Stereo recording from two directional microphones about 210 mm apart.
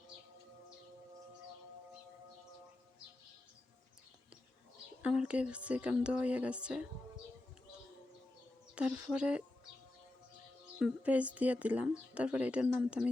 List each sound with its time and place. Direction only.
5.0 s speech: 5° right (ahead or behind)
8.7 s speech: 5° right (ahead or behind)
10.8 s speech: 5° right (ahead or behind)